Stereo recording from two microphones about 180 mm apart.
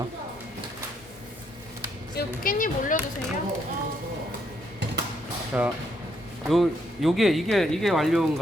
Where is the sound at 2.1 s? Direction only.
50° left (ahead or behind).